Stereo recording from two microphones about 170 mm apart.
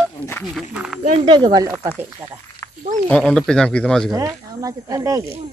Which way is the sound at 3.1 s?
5° left (ahead or behind).